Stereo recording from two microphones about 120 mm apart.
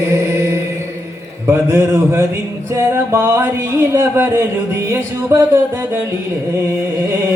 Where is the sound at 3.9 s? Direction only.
20° right (ahead or behind).